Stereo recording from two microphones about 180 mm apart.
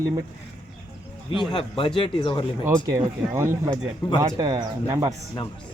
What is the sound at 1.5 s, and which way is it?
Speech, 30° left (ahead or behind).